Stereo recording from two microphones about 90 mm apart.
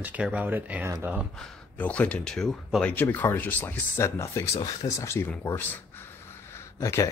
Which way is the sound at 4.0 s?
35° left (ahead or behind).